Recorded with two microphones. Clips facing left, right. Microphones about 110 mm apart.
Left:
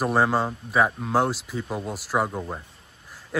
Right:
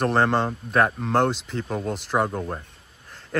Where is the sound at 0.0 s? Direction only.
5° left (ahead or behind).